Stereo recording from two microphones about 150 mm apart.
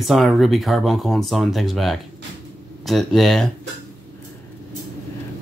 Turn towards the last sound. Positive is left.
turn(degrees=0)  # may be behind; listen again after turning